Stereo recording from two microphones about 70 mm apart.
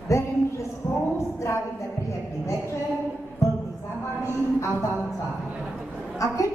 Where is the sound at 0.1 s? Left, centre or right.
Left.